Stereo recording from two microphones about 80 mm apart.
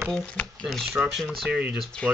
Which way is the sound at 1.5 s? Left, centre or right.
Centre.